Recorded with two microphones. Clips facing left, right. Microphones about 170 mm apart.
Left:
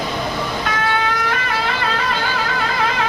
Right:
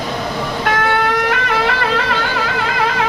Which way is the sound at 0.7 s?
65° right (ahead or behind).